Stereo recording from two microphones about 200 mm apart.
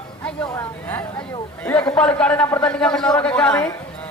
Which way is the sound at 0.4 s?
15° left (ahead or behind).